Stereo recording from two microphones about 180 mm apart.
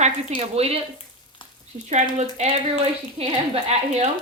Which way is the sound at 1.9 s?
40° right (ahead or behind).